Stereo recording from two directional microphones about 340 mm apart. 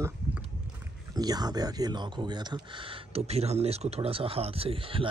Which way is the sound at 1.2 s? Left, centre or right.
Centre.